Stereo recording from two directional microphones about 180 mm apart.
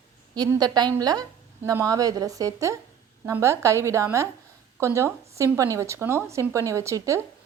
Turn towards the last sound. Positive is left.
turn(degrees=-15)  # may be behind; listen again after turning